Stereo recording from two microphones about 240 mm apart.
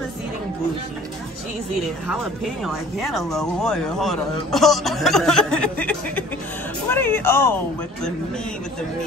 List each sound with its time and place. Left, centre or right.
2.6 s speech: centre